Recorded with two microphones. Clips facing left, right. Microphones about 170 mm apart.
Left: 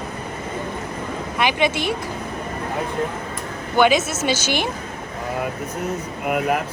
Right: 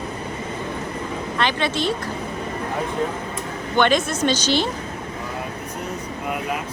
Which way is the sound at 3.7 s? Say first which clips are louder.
Left 2 dB; 5° left (ahead or behind).